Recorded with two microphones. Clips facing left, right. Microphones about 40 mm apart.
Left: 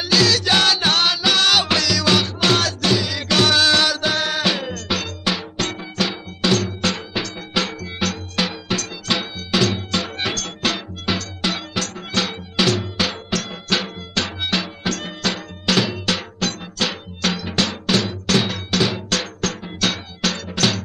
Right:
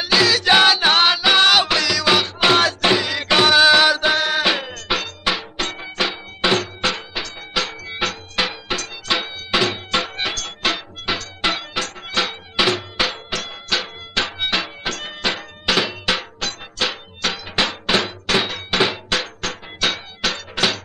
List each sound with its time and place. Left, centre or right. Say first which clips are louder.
0.0 s music: right 1 dB; centre
5.8 s cowbell: even; right; by 7.7 s centre
7.8 s music: even; centre
13.7 s music: left 1 dB; centre
14.1 s music: right 1 dB; centre